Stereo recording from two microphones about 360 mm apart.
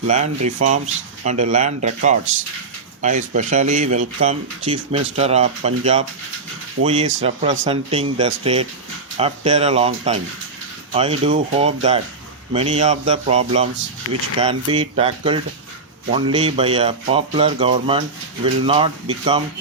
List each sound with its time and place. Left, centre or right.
0.1 s speech: centre